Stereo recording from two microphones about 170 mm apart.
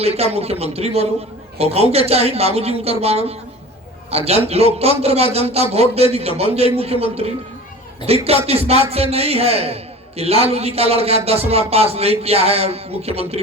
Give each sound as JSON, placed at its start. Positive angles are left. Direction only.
{"t": 0.0, "sound": "a man's voice", "side_deg": -35}